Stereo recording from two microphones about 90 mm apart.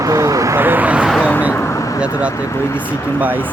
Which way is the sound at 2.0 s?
15° right (ahead or behind).